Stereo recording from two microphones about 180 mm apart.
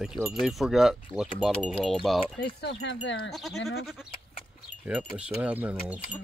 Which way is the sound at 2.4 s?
70° left (ahead or behind).